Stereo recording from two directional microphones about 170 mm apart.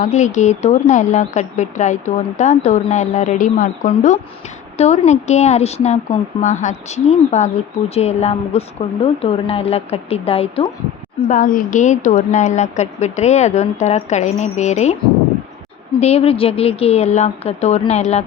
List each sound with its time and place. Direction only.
0.0 s speech: 45° left (ahead or behind)
11.3 s speech: 50° left (ahead or behind)
16.0 s speech: 40° left (ahead or behind)